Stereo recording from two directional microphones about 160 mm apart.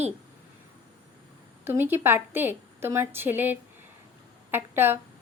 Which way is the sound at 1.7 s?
15° right (ahead or behind).